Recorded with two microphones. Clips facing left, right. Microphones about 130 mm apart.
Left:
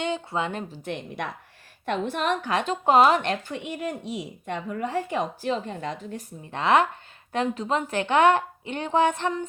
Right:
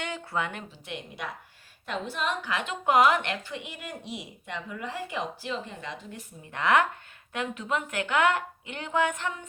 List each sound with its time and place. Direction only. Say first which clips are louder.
0.0 s speech: left 5 dB; 25° left (ahead or behind)
0.7 s a woman's voice: left 7 dB; 45° left (ahead or behind)
3.4 s speech: left 8 dB; 45° left (ahead or behind)
6.5 s a woman's voice: left 3 dB; 25° left (ahead or behind)